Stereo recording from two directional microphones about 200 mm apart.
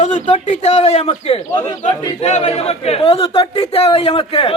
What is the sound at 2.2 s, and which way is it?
Speech, 35° left (ahead or behind).